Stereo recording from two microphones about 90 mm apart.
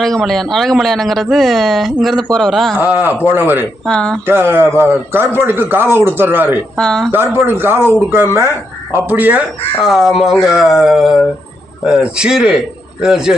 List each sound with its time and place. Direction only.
0.0 s speech: 5° left (ahead or behind)
2.7 s a man's voice: 20° right (ahead or behind)
3.8 s speech: 10° left (ahead or behind)
4.3 s a man's voice: 25° right (ahead or behind)
6.7 s speech: 5° left (ahead or behind)
7.1 s a man's voice: 25° right (ahead or behind)
9.8 s a man's voice: 5° right (ahead or behind)